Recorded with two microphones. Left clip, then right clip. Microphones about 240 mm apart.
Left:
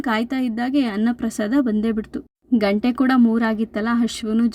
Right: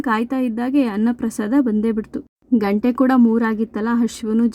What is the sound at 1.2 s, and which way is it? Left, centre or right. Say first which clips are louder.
Speech: right 2 dB; centre.